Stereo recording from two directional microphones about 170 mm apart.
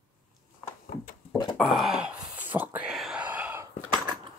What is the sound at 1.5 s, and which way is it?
Wail, centre (ahead or behind).